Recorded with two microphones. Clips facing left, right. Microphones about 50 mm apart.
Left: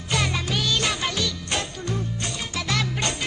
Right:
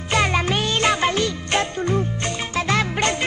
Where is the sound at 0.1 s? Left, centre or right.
Right.